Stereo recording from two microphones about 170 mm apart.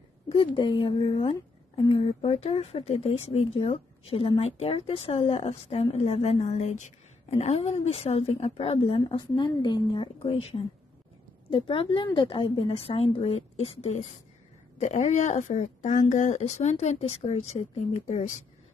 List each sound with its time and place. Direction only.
0.3 s a woman's voice: 30° left (ahead or behind)